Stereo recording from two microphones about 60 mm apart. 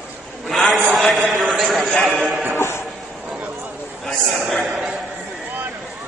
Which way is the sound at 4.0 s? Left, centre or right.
Centre.